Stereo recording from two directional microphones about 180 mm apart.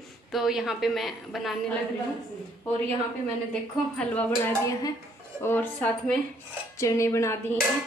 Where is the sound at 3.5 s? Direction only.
5° left (ahead or behind).